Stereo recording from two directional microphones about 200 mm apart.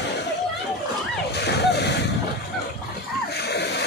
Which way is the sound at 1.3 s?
55° left (ahead or behind).